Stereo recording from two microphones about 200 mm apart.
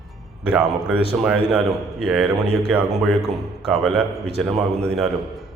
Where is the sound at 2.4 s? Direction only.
30° right (ahead or behind).